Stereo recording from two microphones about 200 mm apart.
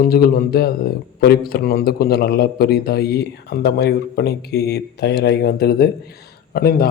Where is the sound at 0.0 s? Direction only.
50° left (ahead or behind).